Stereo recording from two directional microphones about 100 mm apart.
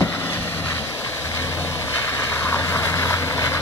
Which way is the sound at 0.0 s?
25° left (ahead or behind).